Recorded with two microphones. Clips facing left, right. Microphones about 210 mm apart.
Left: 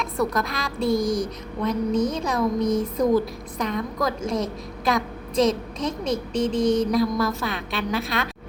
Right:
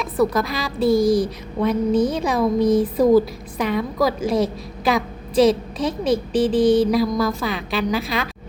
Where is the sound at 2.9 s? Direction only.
5° right (ahead or behind).